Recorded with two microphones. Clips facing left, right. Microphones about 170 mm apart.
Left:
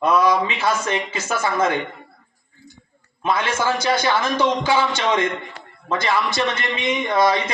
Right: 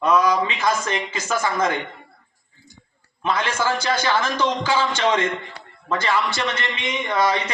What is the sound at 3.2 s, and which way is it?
A man's voice, 15° left (ahead or behind).